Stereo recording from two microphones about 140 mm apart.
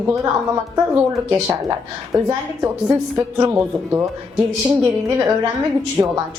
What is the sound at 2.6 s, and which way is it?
Speech, 20° right (ahead or behind).